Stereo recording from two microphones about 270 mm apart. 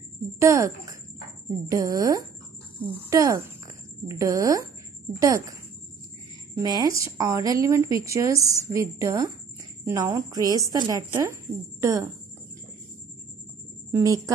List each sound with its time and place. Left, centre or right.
0.4 s a woman's voice: centre
13.9 s a woman's voice: centre